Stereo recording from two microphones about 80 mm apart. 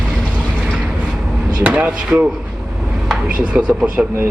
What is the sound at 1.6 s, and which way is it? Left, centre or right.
Speech, centre.